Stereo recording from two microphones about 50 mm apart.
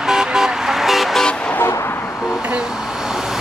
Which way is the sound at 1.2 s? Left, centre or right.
Centre.